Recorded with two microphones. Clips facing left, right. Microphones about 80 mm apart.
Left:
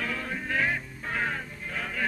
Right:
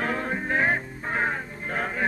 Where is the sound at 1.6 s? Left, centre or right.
Right.